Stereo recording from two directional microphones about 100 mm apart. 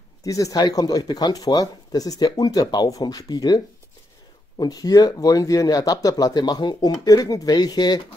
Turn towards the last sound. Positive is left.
turn(degrees=45)  # may be behind; listen again after turning